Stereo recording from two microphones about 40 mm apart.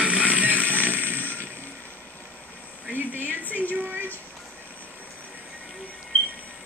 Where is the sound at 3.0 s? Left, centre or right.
Right.